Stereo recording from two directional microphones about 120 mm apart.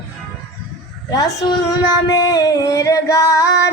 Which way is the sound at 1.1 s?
30° left (ahead or behind).